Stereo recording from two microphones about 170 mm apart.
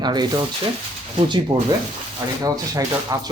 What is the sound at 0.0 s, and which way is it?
Speech, 25° right (ahead or behind).